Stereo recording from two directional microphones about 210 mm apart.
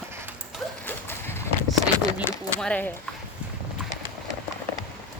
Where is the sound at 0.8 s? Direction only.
10° left (ahead or behind).